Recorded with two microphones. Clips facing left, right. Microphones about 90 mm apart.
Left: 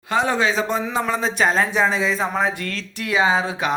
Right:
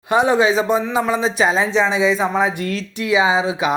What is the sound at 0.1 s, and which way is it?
Speech, 15° right (ahead or behind).